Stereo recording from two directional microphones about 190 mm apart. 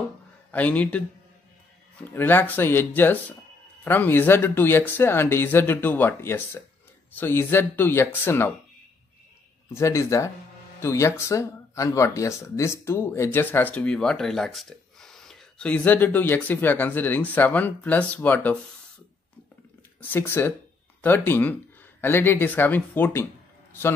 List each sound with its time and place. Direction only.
0.5 s speech: 10° left (ahead or behind)
2.1 s speech: 10° left (ahead or behind)
9.8 s speech: 15° left (ahead or behind)
20.0 s speech: 10° left (ahead or behind)